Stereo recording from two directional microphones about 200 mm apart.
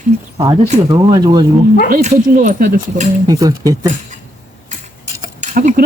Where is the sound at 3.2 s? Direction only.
15° right (ahead or behind).